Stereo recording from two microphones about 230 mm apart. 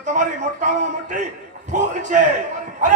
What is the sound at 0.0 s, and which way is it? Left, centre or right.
Speech, right.